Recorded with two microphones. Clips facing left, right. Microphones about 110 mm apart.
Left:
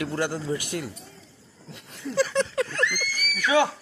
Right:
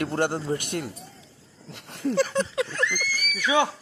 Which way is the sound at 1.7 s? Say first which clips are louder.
Right 2 dB; 70° right (ahead or behind).